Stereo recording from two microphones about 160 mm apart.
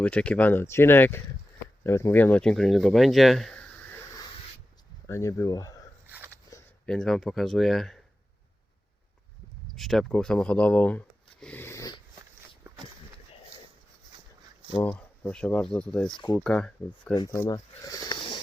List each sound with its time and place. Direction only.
0.0 s speech: 10° left (ahead or behind)
5.0 s speech: 20° left (ahead or behind)
6.1 s a sound: 15° right (ahead or behind)
6.8 s speech: 5° left (ahead or behind)
9.7 s speech: centre (ahead or behind); by 12.0 s 25° left (ahead or behind)
14.8 s speech: 10° left (ahead or behind)
17.2 s speech: 20° left (ahead or behind)